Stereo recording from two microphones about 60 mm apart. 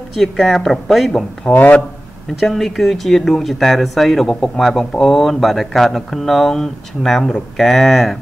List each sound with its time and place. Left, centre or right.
0.1 s speech: centre
1.5 s speech: left
2.4 s speech: centre